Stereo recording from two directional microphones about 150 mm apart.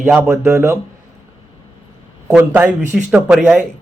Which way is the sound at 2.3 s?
10° right (ahead or behind).